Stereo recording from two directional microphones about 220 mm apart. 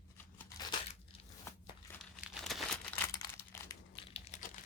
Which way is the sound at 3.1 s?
10° left (ahead or behind).